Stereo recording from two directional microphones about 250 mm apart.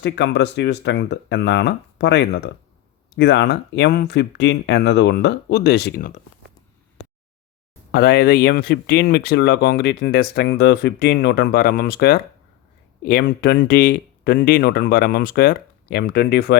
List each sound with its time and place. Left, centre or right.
0.0 s speech: left
7.9 s speech: left